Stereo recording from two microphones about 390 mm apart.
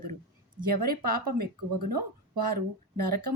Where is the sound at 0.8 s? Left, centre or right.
Right.